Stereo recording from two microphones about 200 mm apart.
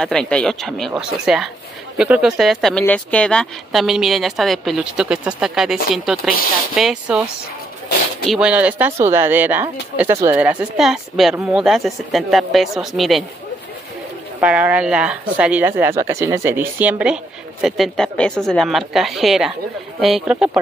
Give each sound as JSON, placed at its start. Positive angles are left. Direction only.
{"t": 0.0, "sound": "speech", "side_deg": 5}
{"t": 8.3, "sound": "speech", "side_deg": -5}
{"t": 14.4, "sound": "speech", "side_deg": -5}